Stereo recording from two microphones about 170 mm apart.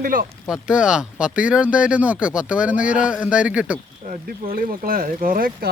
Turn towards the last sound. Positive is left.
turn(degrees=-55)  # may be behind; listen again after turning